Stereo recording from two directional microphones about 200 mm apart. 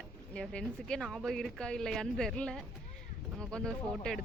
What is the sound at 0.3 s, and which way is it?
Speech, 5° left (ahead or behind).